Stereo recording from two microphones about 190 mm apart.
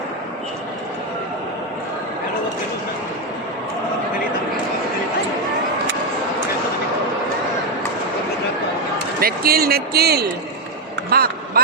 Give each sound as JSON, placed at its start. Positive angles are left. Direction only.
{"t": 9.2, "sound": "a man's voice", "side_deg": -55}
{"t": 11.1, "sound": "vehicle", "side_deg": -50}